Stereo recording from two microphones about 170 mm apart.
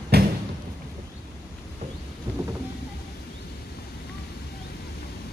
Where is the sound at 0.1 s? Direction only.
65° right (ahead or behind).